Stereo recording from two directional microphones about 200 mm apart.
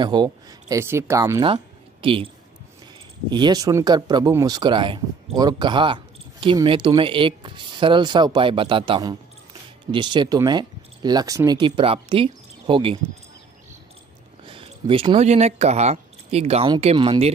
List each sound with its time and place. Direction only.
0.0 s speech: 20° right (ahead or behind)
3.3 s speech: 20° right (ahead or behind)
14.4 s speech: 25° right (ahead or behind)